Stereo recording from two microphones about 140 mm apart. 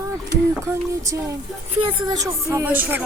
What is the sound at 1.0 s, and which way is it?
Speech, 25° right (ahead or behind).